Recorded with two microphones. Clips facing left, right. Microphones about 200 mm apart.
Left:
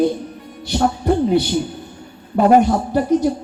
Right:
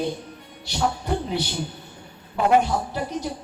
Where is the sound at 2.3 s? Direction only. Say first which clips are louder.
Left 7 dB; 45° left (ahead or behind).